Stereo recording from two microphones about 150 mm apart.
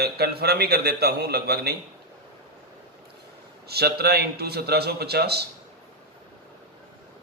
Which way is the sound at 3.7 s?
90° right.